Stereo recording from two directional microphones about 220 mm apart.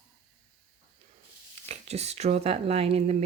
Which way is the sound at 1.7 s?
30° right (ahead or behind).